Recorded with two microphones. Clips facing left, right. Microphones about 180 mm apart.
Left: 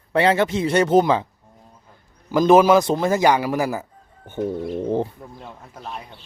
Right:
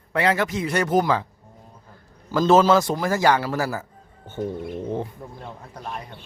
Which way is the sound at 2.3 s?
15° left (ahead or behind).